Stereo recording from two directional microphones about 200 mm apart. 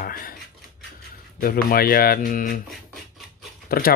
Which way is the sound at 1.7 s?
50° left (ahead or behind).